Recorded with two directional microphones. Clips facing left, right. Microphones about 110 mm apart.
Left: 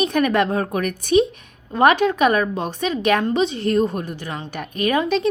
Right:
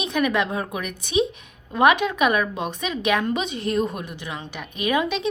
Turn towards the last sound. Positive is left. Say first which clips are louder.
# left 4 dB
turn(degrees=40)  # may be behind; listen again after turning